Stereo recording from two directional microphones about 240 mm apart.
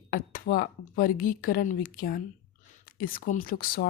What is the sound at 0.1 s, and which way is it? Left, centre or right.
A woman's voice, left.